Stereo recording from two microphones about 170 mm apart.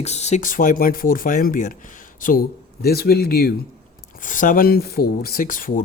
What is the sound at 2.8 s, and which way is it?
Speech, 65° left (ahead or behind).